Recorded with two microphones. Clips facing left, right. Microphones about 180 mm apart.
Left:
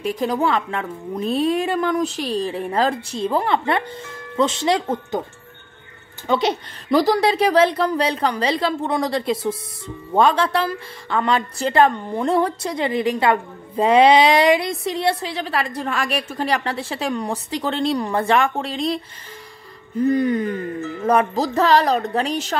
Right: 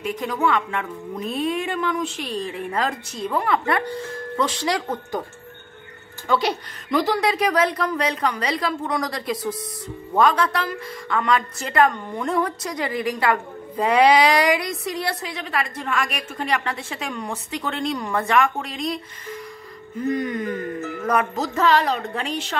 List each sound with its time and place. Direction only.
0.0 s a woman's voice: 35° left (ahead or behind)
6.2 s a woman's voice: 20° left (ahead or behind)
6.9 s a woman's voice: 35° left (ahead or behind)
20.1 s a woman's voice: 30° left (ahead or behind)